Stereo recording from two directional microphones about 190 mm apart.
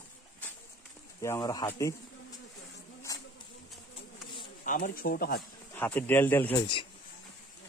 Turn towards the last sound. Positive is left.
turn(degrees=10)  # may be behind; listen again after turning